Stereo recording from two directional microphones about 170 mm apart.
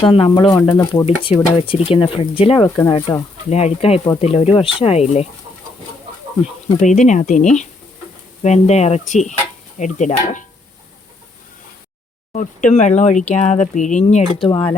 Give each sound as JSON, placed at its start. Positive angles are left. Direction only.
{"t": 0.0, "sound": "speech", "side_deg": 30}
{"t": 2.6, "sound": "speech", "side_deg": 15}
{"t": 3.5, "sound": "speech", "side_deg": 40}
{"t": 6.8, "sound": "speech", "side_deg": 45}
{"t": 12.3, "sound": "speech", "side_deg": 45}